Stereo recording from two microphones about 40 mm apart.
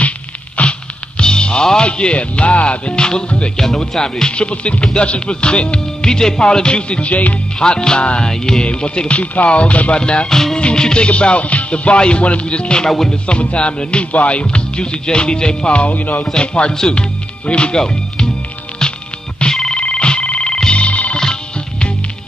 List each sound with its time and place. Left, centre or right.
0.6 s music: left
3.5 s speech: centre
4.5 s music: left
7.5 s music: left
8.3 s speech: centre
8.6 s music: left
15.7 s music: left
16.3 s music: left
16.7 s speech: centre
17.5 s music: left
19.4 s telephone bell ringing: centre
19.8 s music: left